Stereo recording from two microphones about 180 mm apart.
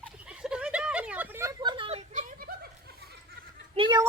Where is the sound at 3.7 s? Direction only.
30° right (ahead or behind).